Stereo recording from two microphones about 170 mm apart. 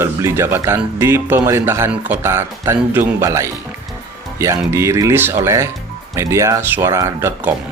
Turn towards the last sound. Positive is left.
turn(degrees=-15)  # may be behind; listen again after turning